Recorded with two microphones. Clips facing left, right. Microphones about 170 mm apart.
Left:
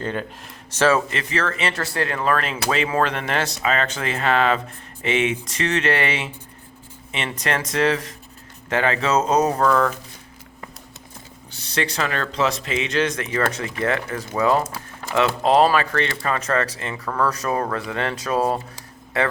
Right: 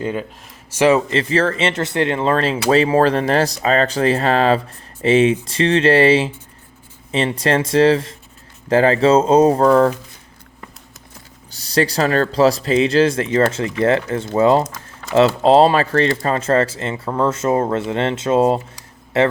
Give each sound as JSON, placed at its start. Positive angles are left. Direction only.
{"t": 0.0, "sound": "speech", "side_deg": -5}
{"t": 1.1, "sound": "speech", "side_deg": -30}
{"t": 11.5, "sound": "speech", "side_deg": -35}